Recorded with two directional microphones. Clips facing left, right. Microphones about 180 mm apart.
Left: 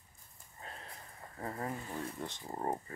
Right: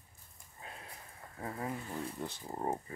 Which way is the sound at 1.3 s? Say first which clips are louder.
Even; 5° right (ahead or behind).